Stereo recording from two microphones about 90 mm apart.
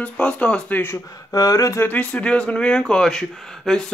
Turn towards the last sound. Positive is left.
turn(degrees=5)  # may be behind; listen again after turning